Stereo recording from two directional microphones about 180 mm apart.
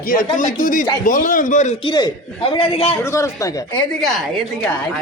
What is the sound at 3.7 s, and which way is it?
A woman's voice, centre (ahead or behind).